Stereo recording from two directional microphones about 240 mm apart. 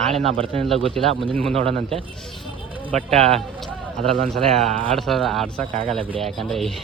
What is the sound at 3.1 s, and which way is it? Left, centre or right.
Speech, right.